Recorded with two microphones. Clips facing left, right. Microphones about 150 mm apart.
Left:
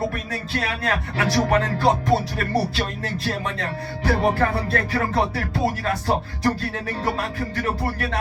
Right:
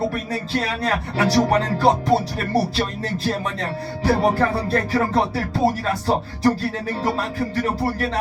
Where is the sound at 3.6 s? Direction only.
35° right (ahead or behind).